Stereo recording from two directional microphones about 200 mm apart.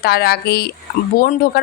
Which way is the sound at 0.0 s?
50° left (ahead or behind).